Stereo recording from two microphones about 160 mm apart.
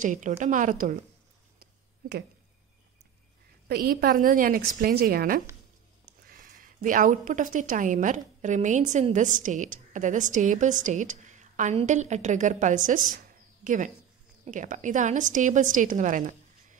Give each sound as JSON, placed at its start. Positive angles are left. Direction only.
{"t": 0.0, "sound": "a woman's voice", "side_deg": -50}
{"t": 1.6, "sound": "a sound", "side_deg": -80}
{"t": 3.6, "sound": "a woman's voice", "side_deg": -70}